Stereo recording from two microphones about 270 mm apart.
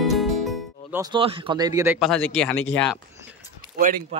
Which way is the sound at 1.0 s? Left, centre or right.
Centre.